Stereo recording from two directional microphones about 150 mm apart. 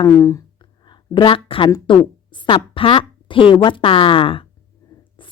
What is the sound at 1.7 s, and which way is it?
A woman's voice, 30° left (ahead or behind).